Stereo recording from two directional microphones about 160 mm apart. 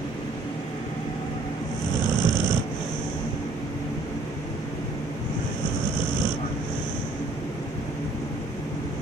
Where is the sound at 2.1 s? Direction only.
25° left (ahead or behind).